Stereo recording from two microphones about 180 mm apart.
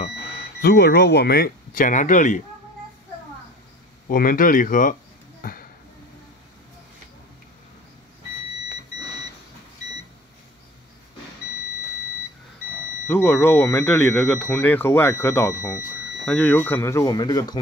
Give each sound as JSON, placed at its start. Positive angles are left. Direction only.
{"t": 0.6, "sound": "speech", "side_deg": 65}
{"t": 4.1, "sound": "speech", "side_deg": 50}
{"t": 5.4, "sound": "a sound", "side_deg": 55}
{"t": 13.1, "sound": "speech", "side_deg": 10}